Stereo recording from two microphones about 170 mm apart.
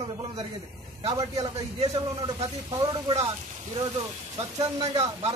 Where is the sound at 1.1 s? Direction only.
20° right (ahead or behind).